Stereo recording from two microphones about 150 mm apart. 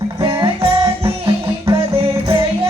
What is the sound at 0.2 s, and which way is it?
Music, 30° right (ahead or behind).